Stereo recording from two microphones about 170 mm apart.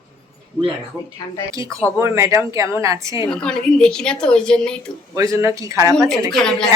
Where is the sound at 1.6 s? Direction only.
5° left (ahead or behind).